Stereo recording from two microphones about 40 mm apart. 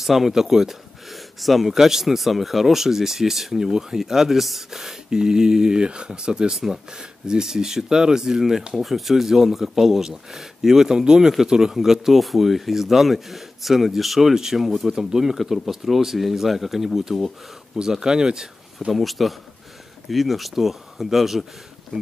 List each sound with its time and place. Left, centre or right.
0.0 s speech: centre; by 6.5 s right
6.5 s speech: centre
18.9 s speech: centre
21.9 s speech: centre